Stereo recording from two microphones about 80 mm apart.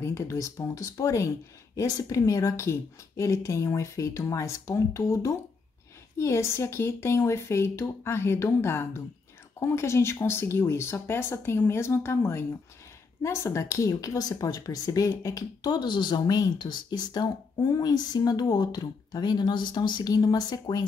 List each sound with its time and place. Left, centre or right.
0.0 s speech: left
20.1 s speech: left